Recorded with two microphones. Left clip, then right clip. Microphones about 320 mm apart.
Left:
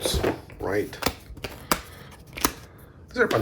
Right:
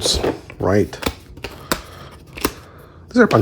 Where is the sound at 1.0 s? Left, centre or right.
Centre.